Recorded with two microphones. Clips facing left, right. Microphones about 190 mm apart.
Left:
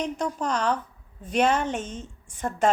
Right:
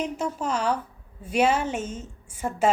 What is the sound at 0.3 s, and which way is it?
A woman's voice, 5° right (ahead or behind).